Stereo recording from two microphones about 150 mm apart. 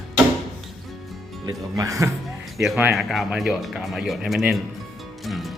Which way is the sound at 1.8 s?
20° right (ahead or behind).